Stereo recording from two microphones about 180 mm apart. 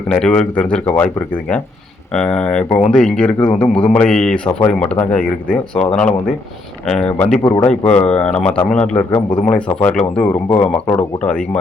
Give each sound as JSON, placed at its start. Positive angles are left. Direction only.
{"t": 0.1, "sound": "speech", "side_deg": 5}
{"t": 7.4, "sound": "a man's voice", "side_deg": 20}
{"t": 7.9, "sound": "speech", "side_deg": 5}